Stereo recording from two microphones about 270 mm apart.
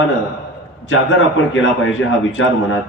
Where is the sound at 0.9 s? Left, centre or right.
Left.